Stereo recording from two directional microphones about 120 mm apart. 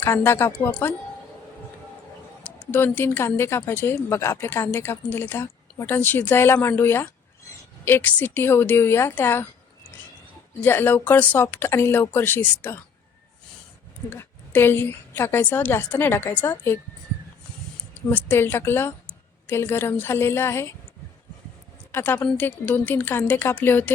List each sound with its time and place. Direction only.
0.0 s speech: 20° left (ahead or behind)
2.4 s speech: 15° left (ahead or behind)
10.6 s a woman's voice: 15° left (ahead or behind)
14.1 s a woman's voice: 15° left (ahead or behind)
18.1 s speech: 15° left (ahead or behind)
21.9 s a woman's voice: 15° left (ahead or behind)